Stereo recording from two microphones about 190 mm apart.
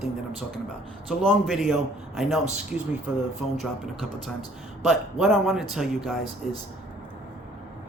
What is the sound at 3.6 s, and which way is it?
A man's voice, centre (ahead or behind).